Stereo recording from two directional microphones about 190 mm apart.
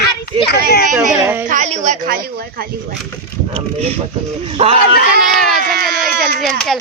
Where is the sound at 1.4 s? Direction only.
40° right (ahead or behind).